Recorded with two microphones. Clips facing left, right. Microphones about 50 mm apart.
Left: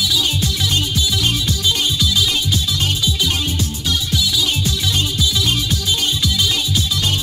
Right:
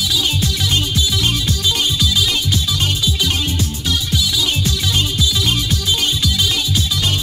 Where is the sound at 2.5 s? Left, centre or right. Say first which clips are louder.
Right 1 dB; centre.